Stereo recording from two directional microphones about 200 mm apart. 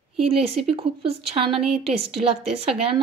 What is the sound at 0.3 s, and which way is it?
A woman's voice, 30° right (ahead or behind).